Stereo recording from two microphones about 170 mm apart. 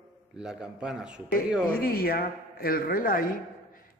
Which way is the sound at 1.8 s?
60° left (ahead or behind).